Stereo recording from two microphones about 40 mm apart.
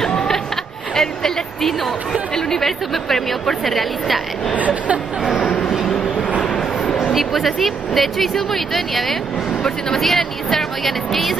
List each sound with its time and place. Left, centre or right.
0.9 s music: centre
2.3 s speech: centre
4.6 s speech: right
6.4 s vehicle: left
7.1 s speech: centre